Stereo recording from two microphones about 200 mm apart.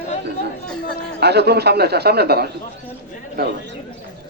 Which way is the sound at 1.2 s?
55° right (ahead or behind).